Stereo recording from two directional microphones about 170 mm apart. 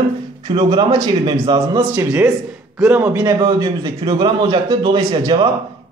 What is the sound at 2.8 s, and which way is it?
Speech, 10° right (ahead or behind).